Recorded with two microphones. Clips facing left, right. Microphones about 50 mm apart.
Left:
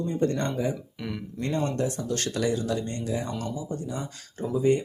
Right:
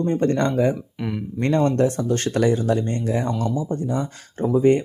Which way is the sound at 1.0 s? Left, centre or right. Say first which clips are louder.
Right 7 dB; centre.